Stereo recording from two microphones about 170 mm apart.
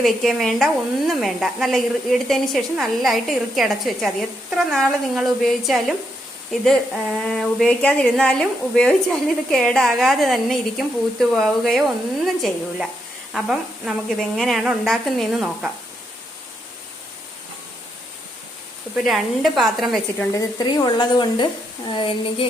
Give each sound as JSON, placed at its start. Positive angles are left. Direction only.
{"t": 0.0, "sound": "a woman's voice", "side_deg": 0}
{"t": 19.0, "sound": "a woman's voice", "side_deg": 0}
{"t": 20.3, "sound": "a woman's voice", "side_deg": 20}